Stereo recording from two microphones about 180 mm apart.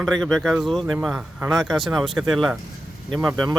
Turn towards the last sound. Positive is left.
turn(degrees=0)  # may be behind; listen again after turning